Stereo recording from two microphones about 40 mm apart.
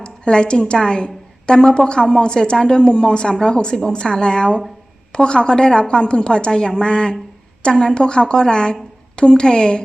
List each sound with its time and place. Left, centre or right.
0.0 s a woman's voice: left